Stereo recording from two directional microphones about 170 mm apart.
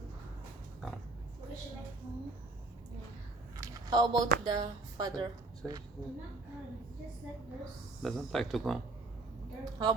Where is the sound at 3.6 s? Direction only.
25° right (ahead or behind).